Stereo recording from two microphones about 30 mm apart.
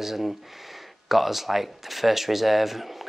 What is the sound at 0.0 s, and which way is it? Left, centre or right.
Speech, centre.